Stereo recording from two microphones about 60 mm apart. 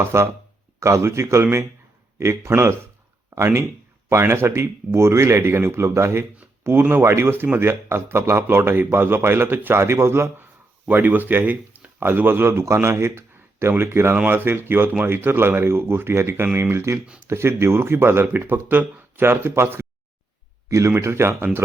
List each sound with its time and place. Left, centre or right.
0.0 s speech: right
0.8 s a man's voice: right
7.0 s speech: right
10.8 s speech: right
12.5 s speech: right
20.7 s speech: right
20.9 s speech: right